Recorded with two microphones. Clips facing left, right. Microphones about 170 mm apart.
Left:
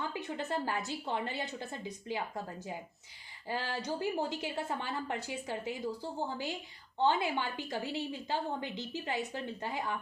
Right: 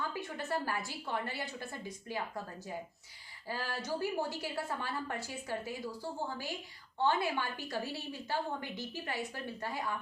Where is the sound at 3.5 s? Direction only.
20° left (ahead or behind).